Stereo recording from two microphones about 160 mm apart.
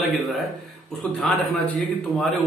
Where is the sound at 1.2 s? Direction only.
Centre (ahead or behind).